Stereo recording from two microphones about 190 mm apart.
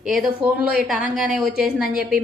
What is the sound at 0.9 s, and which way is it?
Speech, 45° right (ahead or behind).